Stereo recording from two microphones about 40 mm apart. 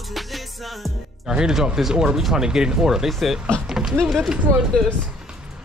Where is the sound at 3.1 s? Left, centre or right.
Centre.